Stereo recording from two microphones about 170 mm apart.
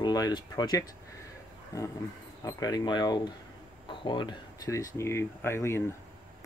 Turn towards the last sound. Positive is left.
turn(degrees=15)  # may be behind; listen again after turning